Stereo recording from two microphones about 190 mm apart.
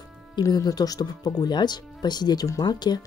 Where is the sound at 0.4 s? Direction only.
20° left (ahead or behind).